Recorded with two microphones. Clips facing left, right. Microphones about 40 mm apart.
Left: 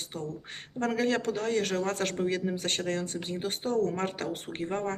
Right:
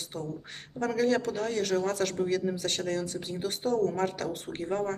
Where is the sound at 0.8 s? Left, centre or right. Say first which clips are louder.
Right 1 dB; left.